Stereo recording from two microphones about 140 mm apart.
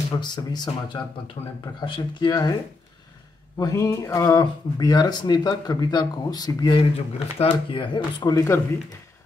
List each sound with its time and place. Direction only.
0.1 s speech: 30° left (ahead or behind)
3.5 s speech: 25° left (ahead or behind)